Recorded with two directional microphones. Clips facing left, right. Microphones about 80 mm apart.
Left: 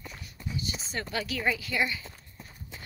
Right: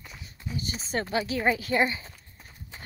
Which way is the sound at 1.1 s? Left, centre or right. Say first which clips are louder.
Right 4 dB; right.